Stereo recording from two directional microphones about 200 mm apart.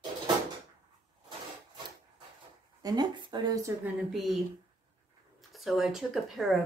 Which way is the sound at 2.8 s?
20° right (ahead or behind).